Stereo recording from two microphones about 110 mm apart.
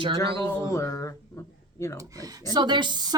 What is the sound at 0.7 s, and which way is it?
Speech, 30° left (ahead or behind).